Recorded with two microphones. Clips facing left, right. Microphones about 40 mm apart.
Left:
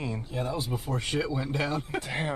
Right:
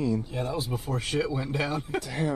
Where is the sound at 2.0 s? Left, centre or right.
Left.